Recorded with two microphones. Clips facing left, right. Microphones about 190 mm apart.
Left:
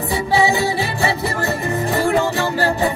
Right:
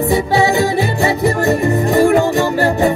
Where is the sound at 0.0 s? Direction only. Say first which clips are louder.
Right 4 dB; 15° right (ahead or behind).